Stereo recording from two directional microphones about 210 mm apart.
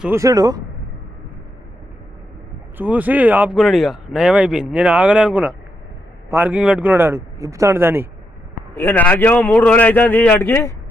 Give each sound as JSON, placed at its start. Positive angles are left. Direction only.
{"t": 0.0, "sound": "speech", "side_deg": -15}
{"t": 2.7, "sound": "speech", "side_deg": -10}
{"t": 8.7, "sound": "a man's voice", "side_deg": 10}